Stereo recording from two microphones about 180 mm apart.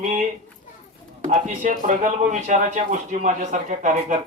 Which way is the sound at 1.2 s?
45° right (ahead or behind).